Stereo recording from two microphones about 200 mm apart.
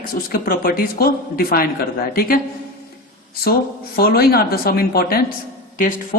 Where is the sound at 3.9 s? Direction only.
50° left (ahead or behind).